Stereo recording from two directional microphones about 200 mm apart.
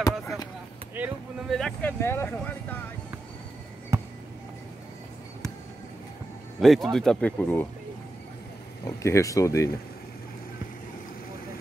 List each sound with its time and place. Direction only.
0.9 s speech: 10° right (ahead or behind)
1.6 s speech: 10° left (ahead or behind)
3.9 s basketball bounce: 15° right (ahead or behind)
6.6 s speech: centre (ahead or behind)
8.8 s speech: 15° left (ahead or behind)